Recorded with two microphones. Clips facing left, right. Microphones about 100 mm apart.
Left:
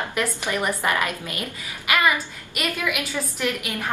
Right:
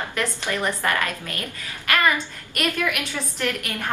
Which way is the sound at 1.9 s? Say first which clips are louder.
Even; 10° left (ahead or behind).